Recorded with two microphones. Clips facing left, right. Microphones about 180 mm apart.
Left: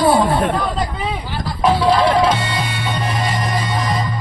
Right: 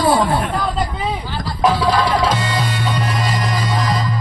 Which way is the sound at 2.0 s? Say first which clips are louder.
Left 3 dB; 60° left (ahead or behind).